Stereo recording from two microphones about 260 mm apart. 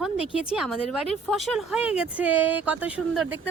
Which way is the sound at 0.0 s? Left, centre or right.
Centre.